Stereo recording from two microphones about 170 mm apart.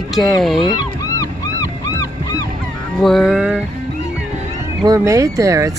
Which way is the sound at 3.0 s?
Centre (ahead or behind).